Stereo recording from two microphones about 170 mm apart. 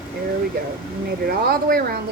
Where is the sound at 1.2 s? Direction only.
60° right (ahead or behind).